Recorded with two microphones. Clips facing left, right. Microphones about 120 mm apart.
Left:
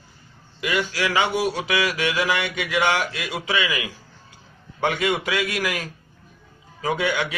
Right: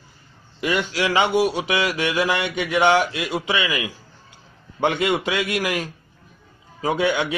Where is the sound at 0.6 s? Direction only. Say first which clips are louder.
Right 2 dB; 35° right (ahead or behind).